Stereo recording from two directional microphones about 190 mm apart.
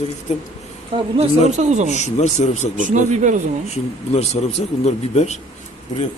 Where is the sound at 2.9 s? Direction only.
40° right (ahead or behind).